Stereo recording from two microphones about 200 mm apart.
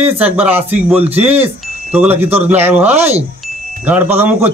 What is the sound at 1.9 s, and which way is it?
Speech, 10° right (ahead or behind).